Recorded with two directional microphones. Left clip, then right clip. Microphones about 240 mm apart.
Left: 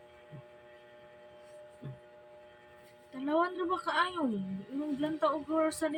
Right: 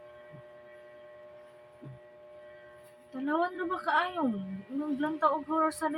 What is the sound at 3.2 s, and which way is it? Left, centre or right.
Speech, centre.